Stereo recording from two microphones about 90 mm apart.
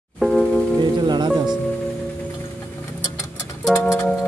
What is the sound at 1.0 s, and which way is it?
Music, 55° right (ahead or behind).